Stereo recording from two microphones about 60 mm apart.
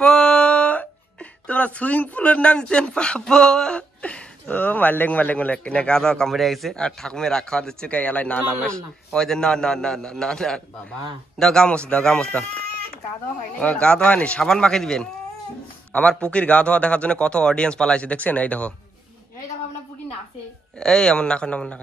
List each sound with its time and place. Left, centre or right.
0.0 s a sound: centre
1.5 s speech: left
4.0 s a man's voice: left; by 6.8 s centre
6.8 s speech: centre
7.9 s a man's voice: left
8.6 s speech: centre
13.6 s a man's voice: centre
20.8 s speech: centre